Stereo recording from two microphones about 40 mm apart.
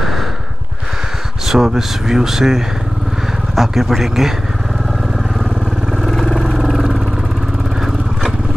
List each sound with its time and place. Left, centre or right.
1.5 s speech: centre
6.0 s vehicle: centre
6.6 s vehicle: centre